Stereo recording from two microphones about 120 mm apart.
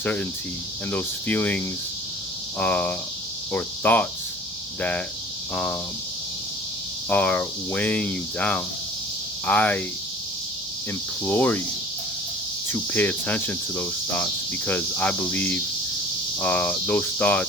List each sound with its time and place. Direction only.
0.0 s cricket: 15° left (ahead or behind)
7.1 s cricket: 10° left (ahead or behind)
11.3 s cricket: 15° left (ahead or behind)
12.6 s cricket: 15° left (ahead or behind)